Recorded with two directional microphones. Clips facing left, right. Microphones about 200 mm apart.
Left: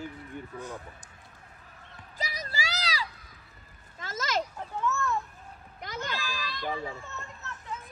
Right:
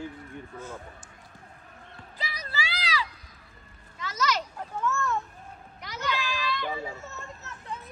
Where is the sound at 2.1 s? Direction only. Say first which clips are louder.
Left 1 dB; 45° left (ahead or behind).